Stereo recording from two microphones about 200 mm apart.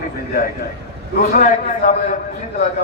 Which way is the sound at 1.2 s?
40° left (ahead or behind).